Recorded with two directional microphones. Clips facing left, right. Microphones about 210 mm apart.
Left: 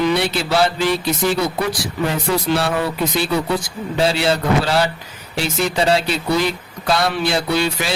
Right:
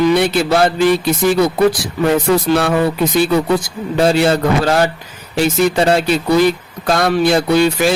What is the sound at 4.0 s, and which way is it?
Speech, 50° right (ahead or behind).